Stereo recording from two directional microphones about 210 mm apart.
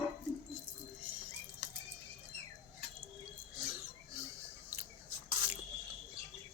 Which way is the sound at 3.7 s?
10° right (ahead or behind).